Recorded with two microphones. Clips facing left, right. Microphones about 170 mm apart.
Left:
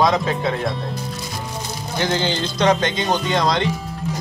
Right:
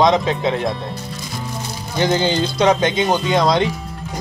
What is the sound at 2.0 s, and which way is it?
Speech, 15° right (ahead or behind).